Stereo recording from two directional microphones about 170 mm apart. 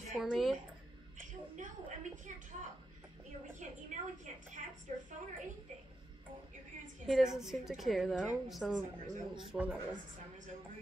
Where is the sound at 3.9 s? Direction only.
45° right (ahead or behind).